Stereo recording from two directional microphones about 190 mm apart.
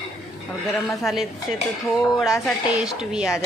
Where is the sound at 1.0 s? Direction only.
Centre (ahead or behind).